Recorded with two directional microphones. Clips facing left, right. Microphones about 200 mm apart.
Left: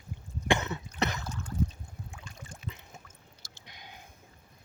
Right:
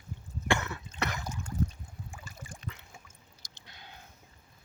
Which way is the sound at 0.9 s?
20° left (ahead or behind).